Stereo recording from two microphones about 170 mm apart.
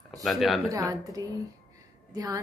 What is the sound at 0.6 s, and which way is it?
A woman's voice, 20° right (ahead or behind).